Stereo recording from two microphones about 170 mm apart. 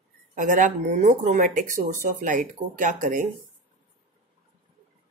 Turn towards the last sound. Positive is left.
turn(degrees=-50)  # may be behind; listen again after turning